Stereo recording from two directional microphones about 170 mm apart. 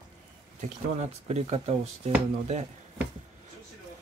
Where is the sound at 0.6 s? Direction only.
40° right (ahead or behind).